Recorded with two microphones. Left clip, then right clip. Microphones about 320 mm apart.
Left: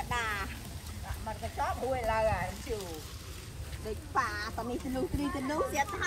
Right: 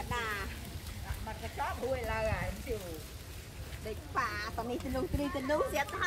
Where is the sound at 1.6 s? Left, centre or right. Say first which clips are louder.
Left 2 dB; centre.